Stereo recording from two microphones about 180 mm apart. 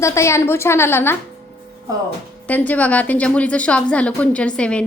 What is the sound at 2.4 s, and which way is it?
A woman's voice, 10° left (ahead or behind).